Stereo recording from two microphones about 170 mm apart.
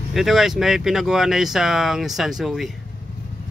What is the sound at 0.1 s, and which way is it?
Speech, centre (ahead or behind).